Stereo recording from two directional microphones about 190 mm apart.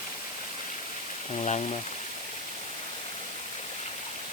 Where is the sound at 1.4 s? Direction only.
35° left (ahead or behind).